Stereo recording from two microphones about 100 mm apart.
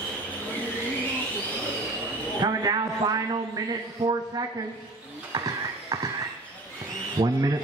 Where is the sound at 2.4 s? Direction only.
40° right (ahead or behind).